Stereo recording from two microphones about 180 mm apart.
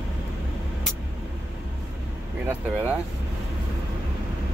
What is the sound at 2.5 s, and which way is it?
Speech, 10° right (ahead or behind).